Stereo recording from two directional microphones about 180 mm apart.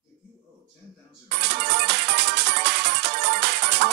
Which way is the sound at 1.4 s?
70° right (ahead or behind).